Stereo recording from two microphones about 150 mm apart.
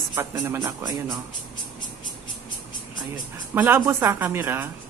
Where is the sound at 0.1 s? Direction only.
20° right (ahead or behind).